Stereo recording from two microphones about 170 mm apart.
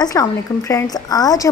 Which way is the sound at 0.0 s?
20° left (ahead or behind).